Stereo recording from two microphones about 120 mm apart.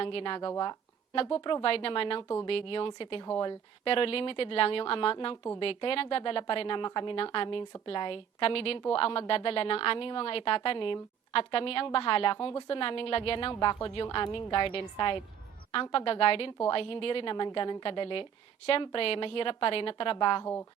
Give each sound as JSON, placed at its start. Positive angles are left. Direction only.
{"t": 0.0, "sound": "a woman's voice", "side_deg": 50}
{"t": 1.1, "sound": "a woman's voice", "side_deg": 50}
{"t": 20.4, "sound": "a woman's voice", "side_deg": 20}